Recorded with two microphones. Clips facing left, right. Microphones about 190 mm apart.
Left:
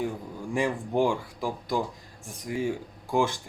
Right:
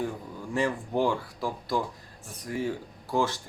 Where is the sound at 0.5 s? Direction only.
15° left (ahead or behind).